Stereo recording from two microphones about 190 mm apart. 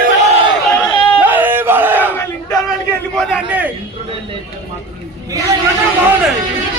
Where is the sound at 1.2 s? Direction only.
10° right (ahead or behind).